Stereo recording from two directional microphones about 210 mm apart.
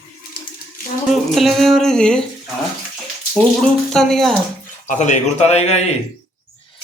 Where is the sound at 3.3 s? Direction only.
Centre (ahead or behind).